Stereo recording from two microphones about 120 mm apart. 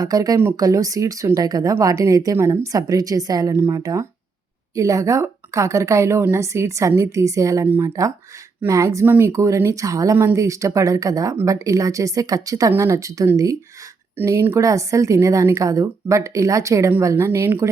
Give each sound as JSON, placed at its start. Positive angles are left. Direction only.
{"t": 0.0, "sound": "speech", "side_deg": -30}